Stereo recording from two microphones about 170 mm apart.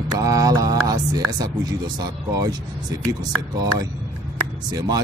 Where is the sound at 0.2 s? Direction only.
20° right (ahead or behind).